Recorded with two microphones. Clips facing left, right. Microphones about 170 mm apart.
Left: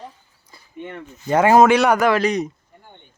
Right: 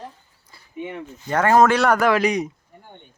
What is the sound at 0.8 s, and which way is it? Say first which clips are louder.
Speech: right 2 dB; 5° right (ahead or behind).